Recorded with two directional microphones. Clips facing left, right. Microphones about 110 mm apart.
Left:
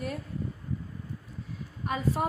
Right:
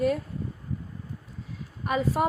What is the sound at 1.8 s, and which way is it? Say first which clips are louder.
Speech: right 4 dB; 90° right.